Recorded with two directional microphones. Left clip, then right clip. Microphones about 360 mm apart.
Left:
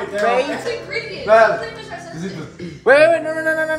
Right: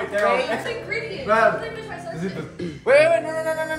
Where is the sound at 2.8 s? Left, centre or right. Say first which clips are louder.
Left 4 dB; left.